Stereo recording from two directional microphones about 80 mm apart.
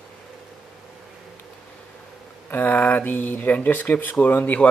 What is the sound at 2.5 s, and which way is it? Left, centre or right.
Speech, left.